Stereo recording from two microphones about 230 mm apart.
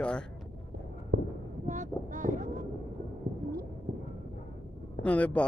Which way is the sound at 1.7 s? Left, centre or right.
Right.